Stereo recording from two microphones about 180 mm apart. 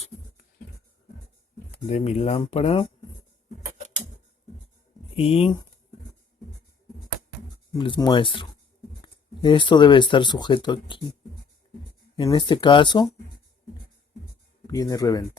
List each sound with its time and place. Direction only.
1.9 s speech: 35° left (ahead or behind)
5.1 s speech: 35° left (ahead or behind)
7.8 s speech: 25° left (ahead or behind)
12.1 s speech: 25° left (ahead or behind)
14.7 s speech: 20° left (ahead or behind)